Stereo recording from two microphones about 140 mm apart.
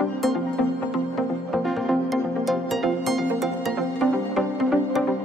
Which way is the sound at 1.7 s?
Centre (ahead or behind).